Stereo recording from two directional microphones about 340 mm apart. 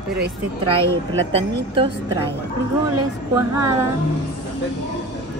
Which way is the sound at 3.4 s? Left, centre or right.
Centre.